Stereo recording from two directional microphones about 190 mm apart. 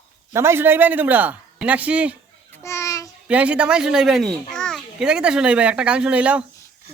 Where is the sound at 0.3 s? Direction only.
15° right (ahead or behind).